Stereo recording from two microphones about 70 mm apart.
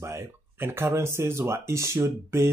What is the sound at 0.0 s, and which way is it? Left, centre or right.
Speech, right.